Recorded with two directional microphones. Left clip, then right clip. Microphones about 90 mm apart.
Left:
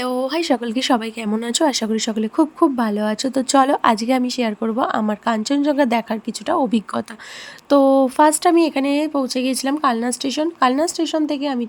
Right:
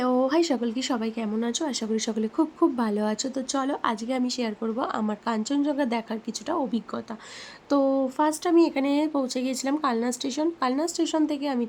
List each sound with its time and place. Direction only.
0.0 s a sound: 55° left (ahead or behind)
0.4 s speech: 40° left (ahead or behind)
1.4 s speech: 70° left (ahead or behind)
1.7 s speech: 45° left (ahead or behind)
2.0 s speech: 25° left (ahead or behind)
3.5 s speech: 55° left (ahead or behind)
4.3 s speech: 30° left (ahead or behind)
7.7 s speech: 35° left (ahead or behind)